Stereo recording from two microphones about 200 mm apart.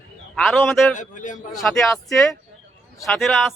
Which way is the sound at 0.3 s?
Centre (ahead or behind).